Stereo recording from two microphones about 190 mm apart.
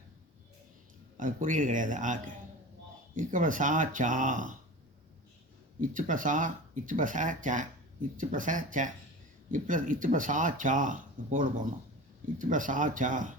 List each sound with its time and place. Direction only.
1.1 s speech: 45° right (ahead or behind)
5.8 s speech: 45° right (ahead or behind)